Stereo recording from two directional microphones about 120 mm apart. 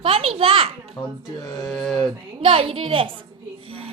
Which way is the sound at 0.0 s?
50° right (ahead or behind).